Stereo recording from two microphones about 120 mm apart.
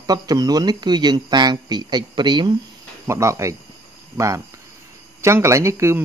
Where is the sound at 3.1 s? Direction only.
25° right (ahead or behind).